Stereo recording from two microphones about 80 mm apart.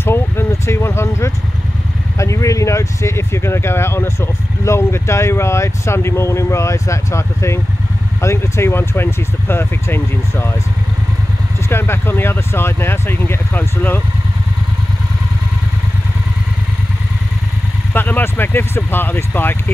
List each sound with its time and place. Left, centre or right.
0.0 s speech: left
11.7 s speech: left
17.9 s speech: left